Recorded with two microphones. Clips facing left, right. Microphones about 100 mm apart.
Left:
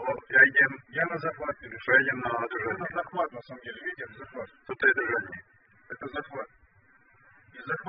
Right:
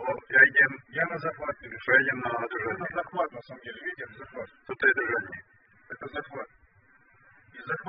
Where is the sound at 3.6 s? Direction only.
30° left (ahead or behind).